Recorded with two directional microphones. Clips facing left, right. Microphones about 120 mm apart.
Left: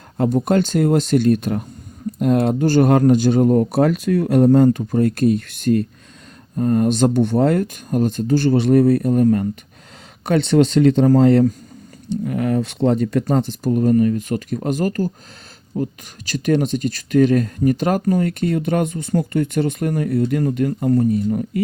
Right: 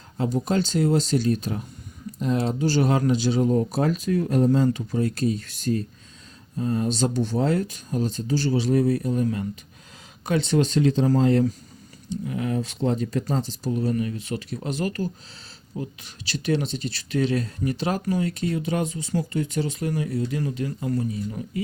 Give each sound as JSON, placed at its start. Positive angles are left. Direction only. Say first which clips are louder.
{"t": 0.2, "sound": "speech", "louder": "left 7 dB", "side_deg": 55}
{"t": 10.2, "sound": "speech", "louder": "left 7 dB", "side_deg": 65}